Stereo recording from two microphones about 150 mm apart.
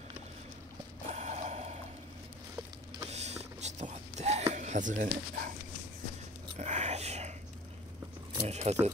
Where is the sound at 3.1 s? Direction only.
45° right (ahead or behind).